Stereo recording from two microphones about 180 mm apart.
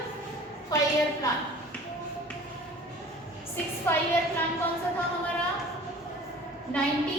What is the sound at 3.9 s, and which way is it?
Speech, 15° left (ahead or behind).